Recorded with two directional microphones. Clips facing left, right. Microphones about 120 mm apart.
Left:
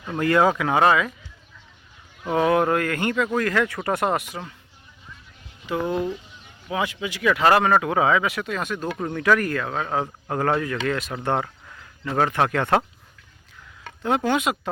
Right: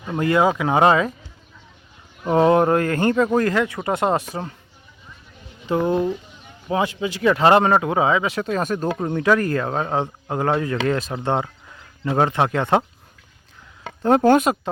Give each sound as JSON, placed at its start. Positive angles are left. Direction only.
{"t": 0.1, "sound": "speech", "side_deg": -20}
{"t": 2.2, "sound": "speech", "side_deg": -30}
{"t": 5.6, "sound": "speech", "side_deg": -30}
{"t": 9.0, "sound": "speech", "side_deg": -25}
{"t": 14.0, "sound": "speech", "side_deg": -40}